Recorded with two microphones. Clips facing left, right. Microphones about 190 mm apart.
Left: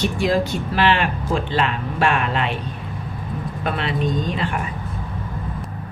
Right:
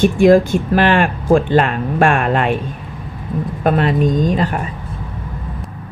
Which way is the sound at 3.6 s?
45° right (ahead or behind).